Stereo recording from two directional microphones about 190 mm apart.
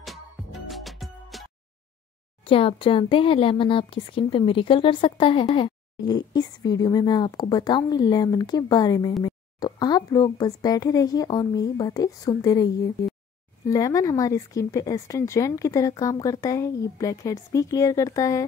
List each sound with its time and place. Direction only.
0.0 s music: centre (ahead or behind)
2.4 s speech: 30° left (ahead or behind)